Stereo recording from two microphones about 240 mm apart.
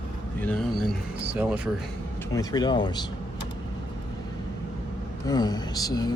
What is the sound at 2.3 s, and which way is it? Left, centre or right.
Speech, centre.